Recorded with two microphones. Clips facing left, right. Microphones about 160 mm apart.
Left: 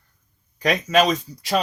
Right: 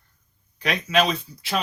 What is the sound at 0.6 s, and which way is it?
Speech, 45° left (ahead or behind).